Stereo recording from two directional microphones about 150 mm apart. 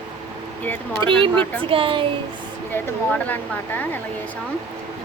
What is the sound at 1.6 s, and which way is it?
Speech, 35° right (ahead or behind).